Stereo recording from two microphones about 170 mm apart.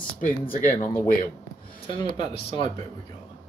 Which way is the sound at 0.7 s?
15° left (ahead or behind).